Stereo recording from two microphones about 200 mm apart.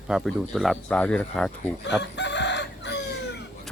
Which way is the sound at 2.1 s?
60° left (ahead or behind).